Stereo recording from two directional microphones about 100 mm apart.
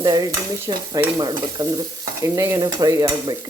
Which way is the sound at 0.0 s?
40° right (ahead or behind).